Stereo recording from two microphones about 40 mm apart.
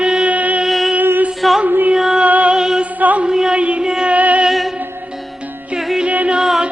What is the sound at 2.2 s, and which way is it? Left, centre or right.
Music, right.